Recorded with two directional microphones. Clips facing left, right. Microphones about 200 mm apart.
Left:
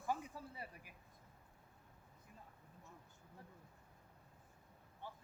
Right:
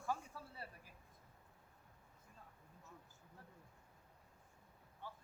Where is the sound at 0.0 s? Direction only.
15° left (ahead or behind).